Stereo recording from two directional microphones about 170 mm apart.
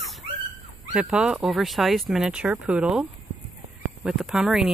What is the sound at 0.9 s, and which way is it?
Speech, 5° right (ahead or behind).